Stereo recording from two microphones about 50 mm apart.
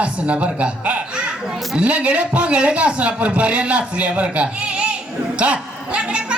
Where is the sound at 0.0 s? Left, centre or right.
Right.